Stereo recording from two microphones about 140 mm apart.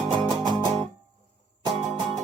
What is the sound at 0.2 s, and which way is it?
Music, 30° right (ahead or behind).